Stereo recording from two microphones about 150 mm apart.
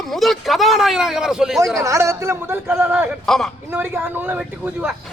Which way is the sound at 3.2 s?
5° left (ahead or behind).